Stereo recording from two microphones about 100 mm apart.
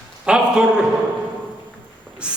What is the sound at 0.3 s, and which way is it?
Speech, 10° right (ahead or behind).